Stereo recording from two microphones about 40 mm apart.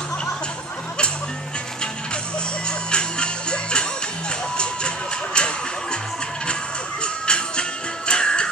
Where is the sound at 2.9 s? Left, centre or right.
Left.